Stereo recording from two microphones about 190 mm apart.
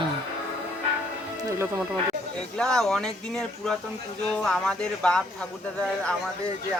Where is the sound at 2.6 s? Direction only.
Centre (ahead or behind).